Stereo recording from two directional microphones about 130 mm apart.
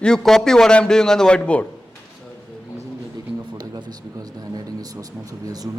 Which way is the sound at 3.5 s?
30° right (ahead or behind).